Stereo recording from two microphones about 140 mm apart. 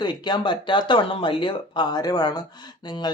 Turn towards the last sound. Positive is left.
turn(degrees=30)  # may be behind; listen again after turning